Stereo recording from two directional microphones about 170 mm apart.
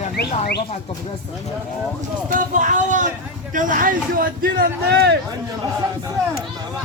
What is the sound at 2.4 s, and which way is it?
A man's voice, 50° right (ahead or behind).